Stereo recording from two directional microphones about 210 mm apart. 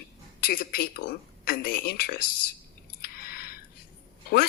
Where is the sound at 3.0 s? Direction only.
45° left (ahead or behind).